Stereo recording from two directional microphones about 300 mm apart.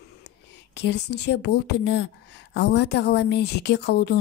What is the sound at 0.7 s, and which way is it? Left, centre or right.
A woman's voice, left.